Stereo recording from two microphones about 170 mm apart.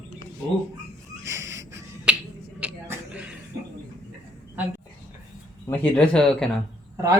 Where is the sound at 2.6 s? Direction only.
5° right (ahead or behind).